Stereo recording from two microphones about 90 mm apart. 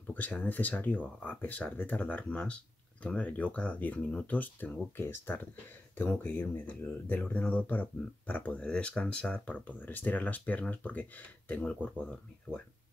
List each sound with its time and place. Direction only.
0.1 s speech: 15° left (ahead or behind)